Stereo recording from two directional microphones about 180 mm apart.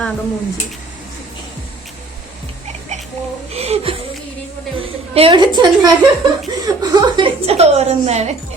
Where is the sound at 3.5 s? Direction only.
35° right (ahead or behind).